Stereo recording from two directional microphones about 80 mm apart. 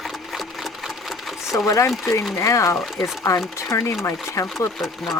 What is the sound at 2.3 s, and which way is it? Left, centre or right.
Speech, left.